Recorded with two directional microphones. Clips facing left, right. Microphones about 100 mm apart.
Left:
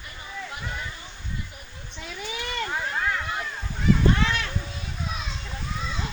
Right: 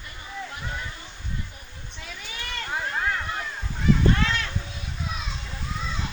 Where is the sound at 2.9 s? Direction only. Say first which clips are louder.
Right 1 dB; 5° right (ahead or behind).